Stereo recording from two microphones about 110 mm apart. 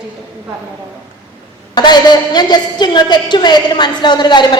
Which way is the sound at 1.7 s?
40° left (ahead or behind).